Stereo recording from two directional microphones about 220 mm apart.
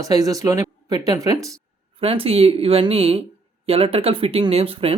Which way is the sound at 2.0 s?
25° right (ahead or behind).